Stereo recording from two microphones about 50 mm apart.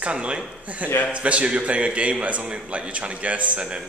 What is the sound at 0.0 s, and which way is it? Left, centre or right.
A man's voice, right.